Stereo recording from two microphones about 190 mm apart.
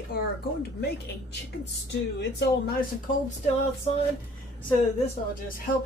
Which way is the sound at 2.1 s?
60° left (ahead or behind).